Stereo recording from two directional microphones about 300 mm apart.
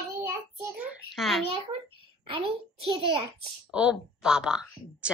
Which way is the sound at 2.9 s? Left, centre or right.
Centre.